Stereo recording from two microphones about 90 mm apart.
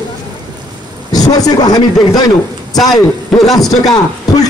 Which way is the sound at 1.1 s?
45° left (ahead or behind).